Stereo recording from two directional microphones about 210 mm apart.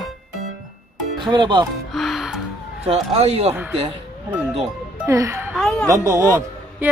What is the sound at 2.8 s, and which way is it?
Speech, 30° right (ahead or behind).